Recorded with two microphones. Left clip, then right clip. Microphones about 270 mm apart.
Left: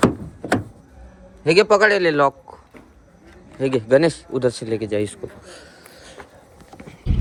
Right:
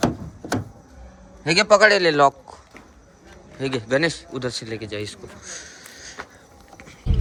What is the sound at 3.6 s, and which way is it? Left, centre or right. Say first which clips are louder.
A man's voice: left 5 dB; centre.